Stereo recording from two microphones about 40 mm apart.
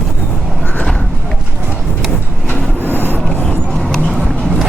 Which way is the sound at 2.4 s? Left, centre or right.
Left.